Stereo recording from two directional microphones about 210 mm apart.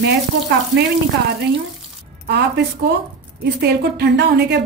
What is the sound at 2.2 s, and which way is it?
Speech, 50° right (ahead or behind).